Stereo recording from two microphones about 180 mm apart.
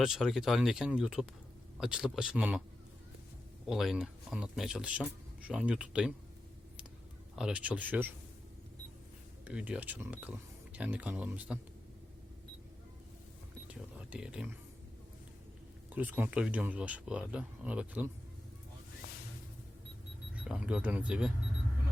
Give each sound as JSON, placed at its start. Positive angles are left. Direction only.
{"t": 0.0, "sound": "speech", "side_deg": 0}
{"t": 3.7, "sound": "speech", "side_deg": 0}
{"t": 7.3, "sound": "speech", "side_deg": -5}
{"t": 9.5, "sound": "speech", "side_deg": -5}
{"t": 13.7, "sound": "a sound", "side_deg": -5}
{"t": 15.9, "sound": "speech", "side_deg": -10}
{"t": 20.3, "sound": "speech", "side_deg": -5}